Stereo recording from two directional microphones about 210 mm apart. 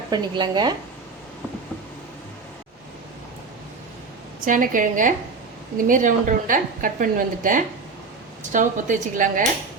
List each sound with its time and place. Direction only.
0.1 s speech: 20° right (ahead or behind)
4.4 s a woman's voice: 40° right (ahead or behind)